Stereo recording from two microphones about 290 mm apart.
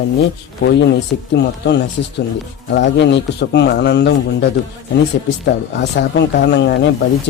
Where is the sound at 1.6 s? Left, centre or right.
Left.